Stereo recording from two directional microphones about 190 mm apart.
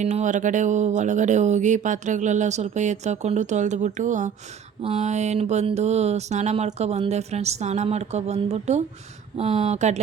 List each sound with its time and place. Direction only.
0.0 s speech: 35° right (ahead or behind)